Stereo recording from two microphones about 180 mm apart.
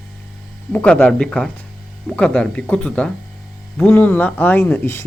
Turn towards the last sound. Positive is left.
turn(degrees=10)  # may be behind; listen again after turning